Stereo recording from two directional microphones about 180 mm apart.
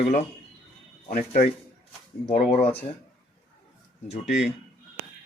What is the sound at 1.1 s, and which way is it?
Speech, 40° left (ahead or behind).